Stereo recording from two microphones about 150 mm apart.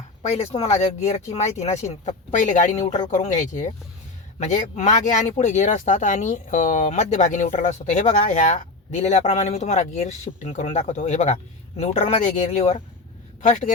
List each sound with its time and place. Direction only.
0.2 s speech: 45° left (ahead or behind)